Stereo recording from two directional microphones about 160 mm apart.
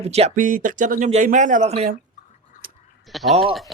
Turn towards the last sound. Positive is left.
turn(degrees=0)  # may be behind; listen again after turning